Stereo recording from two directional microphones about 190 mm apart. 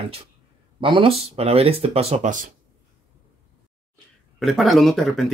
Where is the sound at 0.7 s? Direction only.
25° right (ahead or behind); by 2.5 s 40° right (ahead or behind).